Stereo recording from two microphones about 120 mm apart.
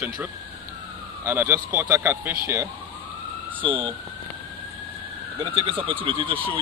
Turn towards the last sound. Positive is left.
turn(degrees=-45)  # may be behind; listen again after turning